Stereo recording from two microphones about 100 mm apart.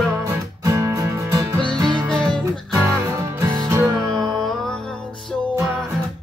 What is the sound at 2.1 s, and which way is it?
Music, 5° left (ahead or behind).